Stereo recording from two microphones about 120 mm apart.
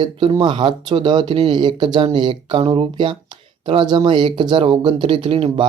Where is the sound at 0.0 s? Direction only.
40° right (ahead or behind).